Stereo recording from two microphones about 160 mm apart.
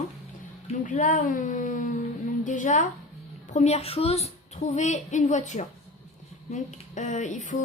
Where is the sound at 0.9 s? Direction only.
50° left (ahead or behind).